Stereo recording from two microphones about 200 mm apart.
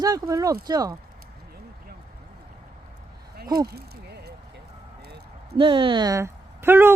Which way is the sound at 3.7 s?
55° right (ahead or behind).